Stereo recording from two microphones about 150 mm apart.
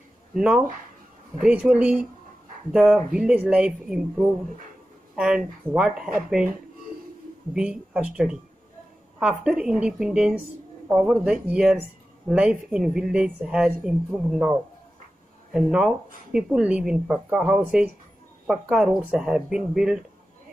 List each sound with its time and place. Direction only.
0.3 s speech: 5° right (ahead or behind)
7.5 s speech: 5° right (ahead or behind)